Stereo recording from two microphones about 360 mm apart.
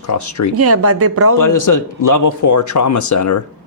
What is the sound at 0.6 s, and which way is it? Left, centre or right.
Speech, right.